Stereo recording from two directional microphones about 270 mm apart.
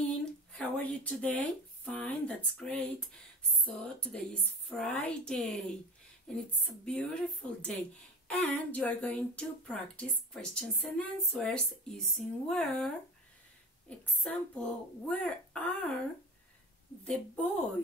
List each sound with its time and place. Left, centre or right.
0.0 s a sound: centre
3.6 s speech: centre
17.0 s speech: centre